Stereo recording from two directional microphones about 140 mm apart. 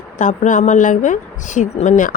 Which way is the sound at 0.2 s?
65° left (ahead or behind).